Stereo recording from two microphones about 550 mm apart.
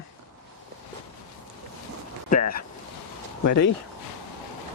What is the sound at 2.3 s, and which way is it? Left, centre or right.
Speech, centre.